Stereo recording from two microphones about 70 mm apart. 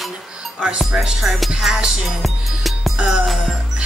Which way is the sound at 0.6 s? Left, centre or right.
Centre.